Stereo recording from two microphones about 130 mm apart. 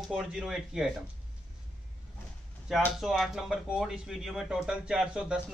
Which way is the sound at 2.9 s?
Centre (ahead or behind).